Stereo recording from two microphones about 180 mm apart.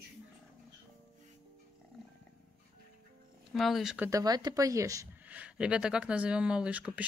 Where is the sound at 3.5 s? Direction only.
Centre (ahead or behind).